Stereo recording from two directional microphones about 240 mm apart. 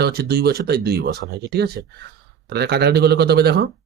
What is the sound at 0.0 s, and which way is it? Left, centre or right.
Speech, right.